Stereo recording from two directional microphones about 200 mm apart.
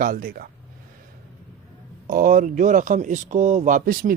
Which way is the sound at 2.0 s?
40° right (ahead or behind).